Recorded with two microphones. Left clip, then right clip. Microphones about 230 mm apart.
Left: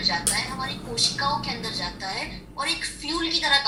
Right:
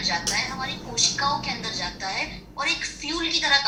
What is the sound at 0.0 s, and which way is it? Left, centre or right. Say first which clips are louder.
A woman's voice: even; centre.